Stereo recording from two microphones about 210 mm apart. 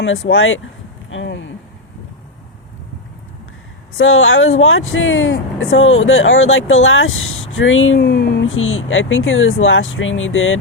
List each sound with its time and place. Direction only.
0.0 s speech: 70° left (ahead or behind)
3.9 s speech: 70° left (ahead or behind)
8.0 s speech: 50° left (ahead or behind); by 10.6 s 70° left (ahead or behind)